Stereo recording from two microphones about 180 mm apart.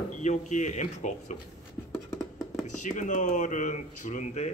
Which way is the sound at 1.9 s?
15° left (ahead or behind).